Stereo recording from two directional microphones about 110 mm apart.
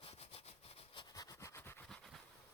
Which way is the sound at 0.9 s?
40° left (ahead or behind).